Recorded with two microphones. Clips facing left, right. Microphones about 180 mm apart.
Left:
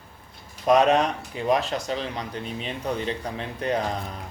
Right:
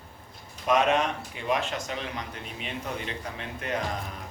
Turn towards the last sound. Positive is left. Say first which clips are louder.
# left 5 dB
turn(degrees=35)  # may be behind; listen again after turning